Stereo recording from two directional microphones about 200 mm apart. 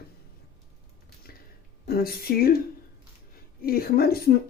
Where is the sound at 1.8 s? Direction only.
50° left (ahead or behind).